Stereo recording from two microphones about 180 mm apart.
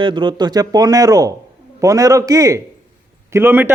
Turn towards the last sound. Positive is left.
turn(degrees=-10)  # may be behind; listen again after turning